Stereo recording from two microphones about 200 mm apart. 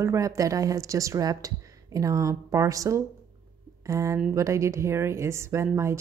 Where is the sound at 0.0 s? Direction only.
15° right (ahead or behind).